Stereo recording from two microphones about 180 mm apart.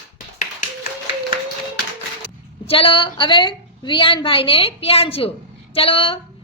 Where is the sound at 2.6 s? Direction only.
30° left (ahead or behind).